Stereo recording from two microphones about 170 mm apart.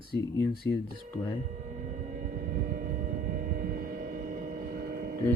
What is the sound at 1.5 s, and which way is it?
Vehicle, 45° right (ahead or behind).